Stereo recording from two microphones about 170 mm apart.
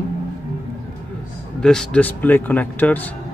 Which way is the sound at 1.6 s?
5° left (ahead or behind).